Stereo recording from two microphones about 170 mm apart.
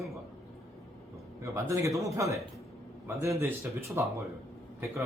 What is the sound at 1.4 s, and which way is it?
A man's voice, 15° right (ahead or behind).